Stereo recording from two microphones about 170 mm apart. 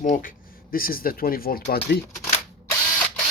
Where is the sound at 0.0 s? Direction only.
50° left (ahead or behind).